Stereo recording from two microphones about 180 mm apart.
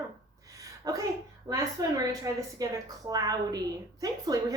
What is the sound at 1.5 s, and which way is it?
A woman's voice, 15° right (ahead or behind).